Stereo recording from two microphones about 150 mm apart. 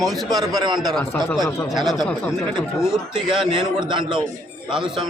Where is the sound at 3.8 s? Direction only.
30° right (ahead or behind).